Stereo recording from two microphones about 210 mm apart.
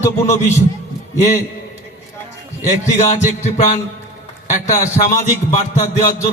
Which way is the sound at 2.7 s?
35° left (ahead or behind).